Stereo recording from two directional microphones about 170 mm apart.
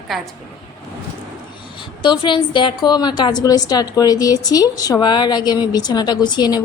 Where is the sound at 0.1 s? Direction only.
Centre (ahead or behind).